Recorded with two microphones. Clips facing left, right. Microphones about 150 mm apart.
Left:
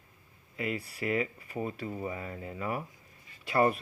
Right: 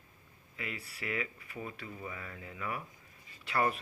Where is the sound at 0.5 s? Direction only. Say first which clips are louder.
Left 9 dB; 40° left (ahead or behind).